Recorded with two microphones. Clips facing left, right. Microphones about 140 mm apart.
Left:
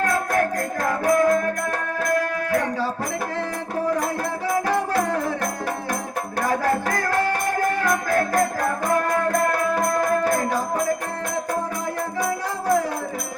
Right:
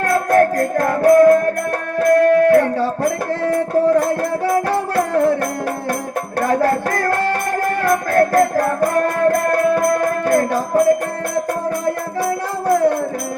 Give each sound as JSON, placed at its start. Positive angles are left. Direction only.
{"t": 0.3, "sound": "music", "side_deg": -60}
{"t": 6.4, "sound": "music", "side_deg": -55}